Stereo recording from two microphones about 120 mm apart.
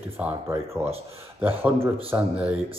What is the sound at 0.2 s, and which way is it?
Speech, 15° right (ahead or behind).